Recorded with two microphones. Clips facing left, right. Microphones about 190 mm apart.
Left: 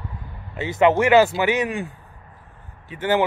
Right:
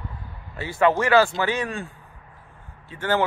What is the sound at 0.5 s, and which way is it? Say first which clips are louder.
A man's voice: left 3 dB; 20° left (ahead or behind).